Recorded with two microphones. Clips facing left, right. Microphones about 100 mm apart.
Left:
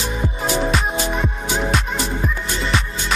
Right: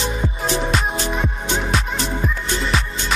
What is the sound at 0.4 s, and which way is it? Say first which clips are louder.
Music: left 2 dB; centre (ahead or behind).